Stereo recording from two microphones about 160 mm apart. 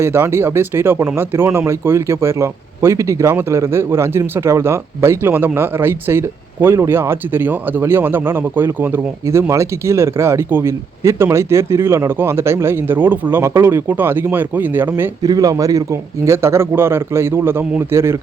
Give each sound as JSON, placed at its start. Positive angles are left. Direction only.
{"t": 0.0, "sound": "speech", "side_deg": -15}